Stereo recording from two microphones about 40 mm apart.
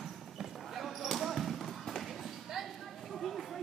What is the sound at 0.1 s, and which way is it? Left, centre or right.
Basketball bounce, centre.